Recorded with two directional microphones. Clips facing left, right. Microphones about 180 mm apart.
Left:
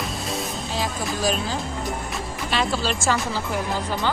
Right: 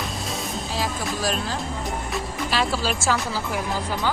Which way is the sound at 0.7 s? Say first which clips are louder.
Left 1 dB; centre (ahead or behind).